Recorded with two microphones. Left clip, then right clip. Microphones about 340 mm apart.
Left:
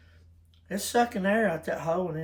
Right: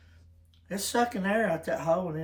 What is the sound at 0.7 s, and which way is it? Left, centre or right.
Speech, centre.